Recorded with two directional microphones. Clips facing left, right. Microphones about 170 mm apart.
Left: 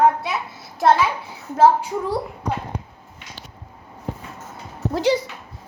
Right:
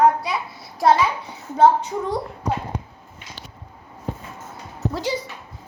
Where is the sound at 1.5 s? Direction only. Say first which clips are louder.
Even; 5° left (ahead or behind).